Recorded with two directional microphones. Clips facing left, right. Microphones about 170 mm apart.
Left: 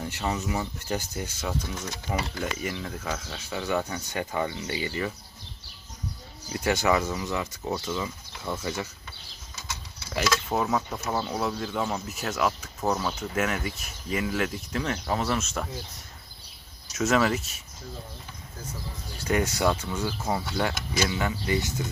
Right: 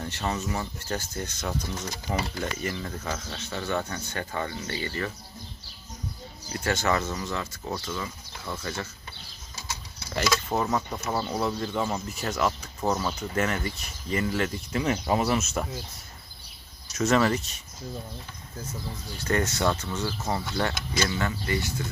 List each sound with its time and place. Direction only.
0.0 s speech: 10° left (ahead or behind)
6.5 s speech: 15° left (ahead or behind)
10.5 s speech: 5° left (ahead or behind)
16.9 s speech: 5° left (ahead or behind)
19.3 s speech: 10° left (ahead or behind)